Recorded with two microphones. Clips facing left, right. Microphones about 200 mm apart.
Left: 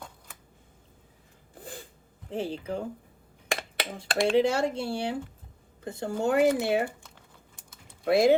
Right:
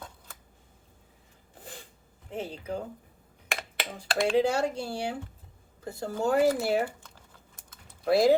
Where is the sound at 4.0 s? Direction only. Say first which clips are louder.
Left 1 dB; 25° left (ahead or behind).